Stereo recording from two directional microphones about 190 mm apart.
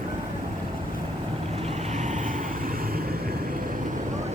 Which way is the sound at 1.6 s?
35° right (ahead or behind).